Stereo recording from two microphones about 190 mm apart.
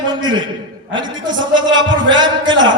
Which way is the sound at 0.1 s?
25° right (ahead or behind).